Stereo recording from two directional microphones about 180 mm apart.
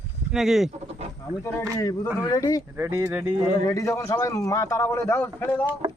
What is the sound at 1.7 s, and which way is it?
Speech, 20° left (ahead or behind).